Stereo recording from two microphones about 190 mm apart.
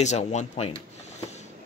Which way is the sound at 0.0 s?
35° left (ahead or behind).